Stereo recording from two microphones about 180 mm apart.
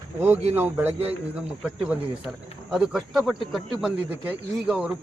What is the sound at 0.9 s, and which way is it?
Speech, 35° right (ahead or behind).